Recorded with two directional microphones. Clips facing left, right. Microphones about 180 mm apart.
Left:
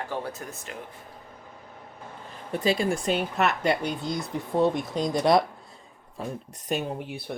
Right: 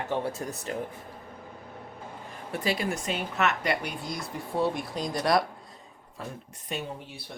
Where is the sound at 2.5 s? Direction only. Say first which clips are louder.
Left 5 dB; 25° left (ahead or behind).